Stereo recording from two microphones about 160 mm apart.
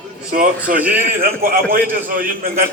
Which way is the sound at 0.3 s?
60° right (ahead or behind).